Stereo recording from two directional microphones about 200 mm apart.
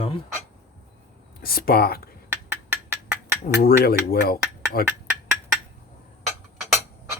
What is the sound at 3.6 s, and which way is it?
Speech, 50° left (ahead or behind).